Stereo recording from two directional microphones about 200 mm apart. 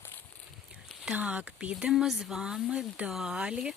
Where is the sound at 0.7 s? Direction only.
Centre (ahead or behind).